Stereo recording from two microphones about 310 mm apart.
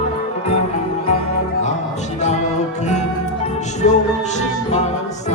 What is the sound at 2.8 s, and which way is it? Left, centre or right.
Music, left.